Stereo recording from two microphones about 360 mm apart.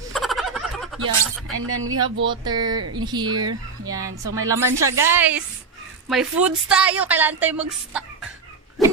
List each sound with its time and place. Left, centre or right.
0.1 s fowl: centre
1.5 s speech: right
2.4 s a woman's voice: centre
2.8 s speech: right
3.1 s a woman's voice: centre
8.8 s dog: centre